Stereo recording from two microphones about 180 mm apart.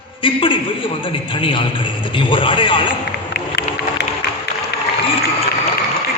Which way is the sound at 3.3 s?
65° left (ahead or behind).